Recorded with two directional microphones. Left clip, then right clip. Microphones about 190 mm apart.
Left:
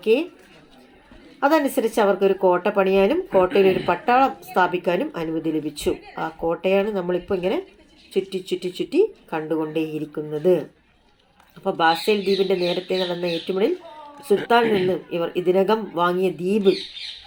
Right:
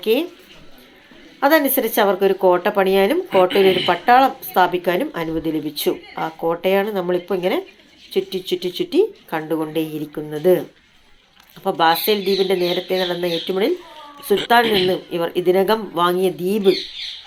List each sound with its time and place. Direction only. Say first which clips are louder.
0.0 s speech: right 1 dB; centre (ahead or behind)
1.4 s speech: right 3 dB; 5° left (ahead or behind)